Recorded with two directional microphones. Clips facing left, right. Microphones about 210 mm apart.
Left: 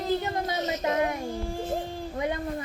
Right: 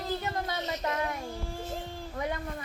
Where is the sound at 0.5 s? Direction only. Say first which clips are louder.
Left 5 dB; 45° left (ahead or behind).